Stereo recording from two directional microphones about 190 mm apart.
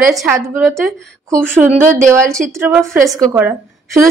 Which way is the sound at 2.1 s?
15° right (ahead or behind).